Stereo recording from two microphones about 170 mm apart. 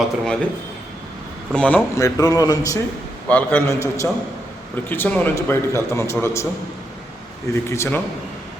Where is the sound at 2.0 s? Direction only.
20° left (ahead or behind).